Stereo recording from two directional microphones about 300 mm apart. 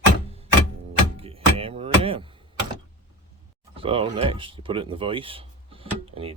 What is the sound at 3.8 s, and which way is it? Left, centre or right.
Speech, centre.